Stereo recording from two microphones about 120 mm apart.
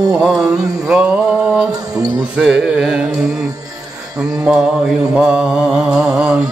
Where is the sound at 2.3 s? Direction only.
5° right (ahead or behind).